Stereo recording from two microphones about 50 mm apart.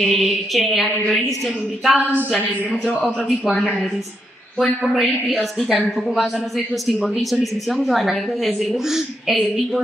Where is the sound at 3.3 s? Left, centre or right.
Centre.